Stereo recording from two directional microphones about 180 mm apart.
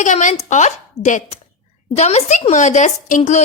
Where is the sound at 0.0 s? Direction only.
45° left (ahead or behind).